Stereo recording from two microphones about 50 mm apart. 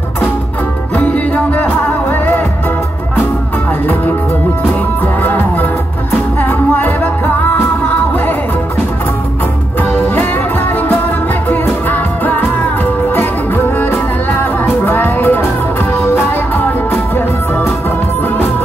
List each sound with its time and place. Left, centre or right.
0.9 s music: left
5.0 s music: left
9.8 s music: left
11.9 s music: left